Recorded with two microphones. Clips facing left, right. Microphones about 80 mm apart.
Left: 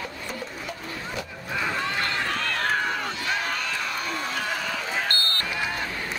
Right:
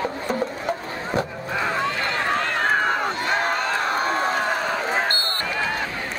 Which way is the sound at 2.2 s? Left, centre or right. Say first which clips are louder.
Right 5 dB; right.